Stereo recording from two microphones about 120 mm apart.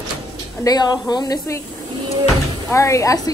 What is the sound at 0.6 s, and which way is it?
A woman's voice, 35° left (ahead or behind).